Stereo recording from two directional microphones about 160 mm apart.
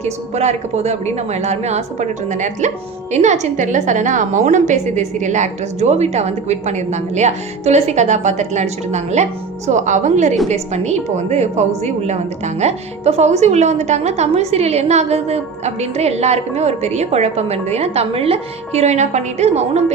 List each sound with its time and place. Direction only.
0.0 s a woman's voice: 45° right (ahead or behind)